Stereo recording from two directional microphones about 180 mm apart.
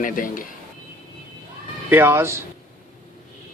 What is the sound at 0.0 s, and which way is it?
Speech, 50° left (ahead or behind).